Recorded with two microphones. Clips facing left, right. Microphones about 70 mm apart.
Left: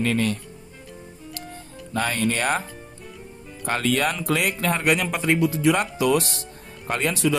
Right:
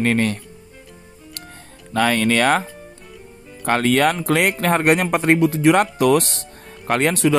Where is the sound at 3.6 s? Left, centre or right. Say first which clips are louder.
Right 6 dB; right.